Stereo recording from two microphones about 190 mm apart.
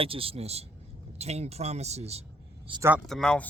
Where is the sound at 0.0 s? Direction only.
30° right (ahead or behind).